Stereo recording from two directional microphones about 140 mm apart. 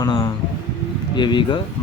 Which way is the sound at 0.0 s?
25° left (ahead or behind).